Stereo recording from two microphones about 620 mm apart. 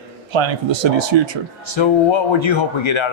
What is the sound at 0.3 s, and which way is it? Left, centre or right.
A man's voice, right.